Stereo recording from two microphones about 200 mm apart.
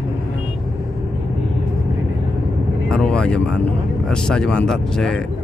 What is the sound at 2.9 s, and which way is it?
Speech, 5° left (ahead or behind).